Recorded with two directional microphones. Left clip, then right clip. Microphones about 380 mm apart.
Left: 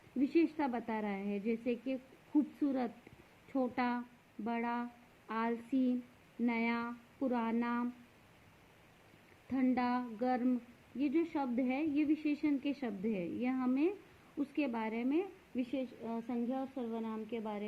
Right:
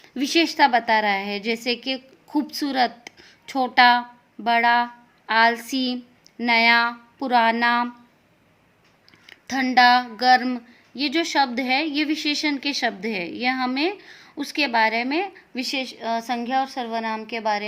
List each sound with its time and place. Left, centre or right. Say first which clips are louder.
0.2 s speech: right 15 dB; centre
9.5 s speech: right 19 dB; centre